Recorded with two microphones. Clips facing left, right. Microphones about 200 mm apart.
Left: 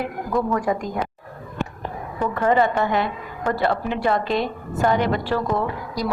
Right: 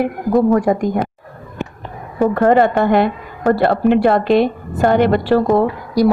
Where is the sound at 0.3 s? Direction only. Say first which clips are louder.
Right 9 dB; 40° right (ahead or behind).